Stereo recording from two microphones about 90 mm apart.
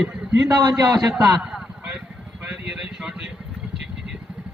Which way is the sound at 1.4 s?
10° right (ahead or behind).